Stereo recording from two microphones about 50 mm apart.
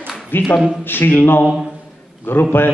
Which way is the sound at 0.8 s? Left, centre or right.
Left.